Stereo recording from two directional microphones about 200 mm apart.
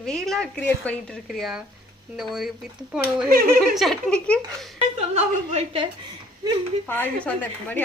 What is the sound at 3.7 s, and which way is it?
Speech, centre (ahead or behind).